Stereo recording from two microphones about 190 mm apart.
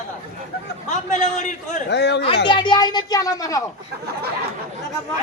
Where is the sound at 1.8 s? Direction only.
65° left (ahead or behind).